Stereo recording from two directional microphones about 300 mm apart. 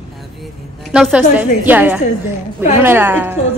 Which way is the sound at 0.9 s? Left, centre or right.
Centre.